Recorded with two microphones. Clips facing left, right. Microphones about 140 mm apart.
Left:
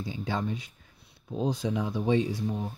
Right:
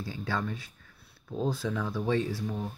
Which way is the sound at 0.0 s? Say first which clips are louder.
Left 2 dB; 20° left (ahead or behind).